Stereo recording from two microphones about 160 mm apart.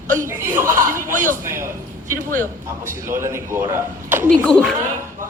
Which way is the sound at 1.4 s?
15° right (ahead or behind).